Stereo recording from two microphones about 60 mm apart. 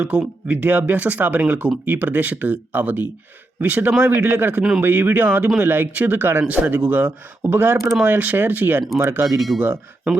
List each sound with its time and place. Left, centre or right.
0.0 s speech: right
7.5 s speech: right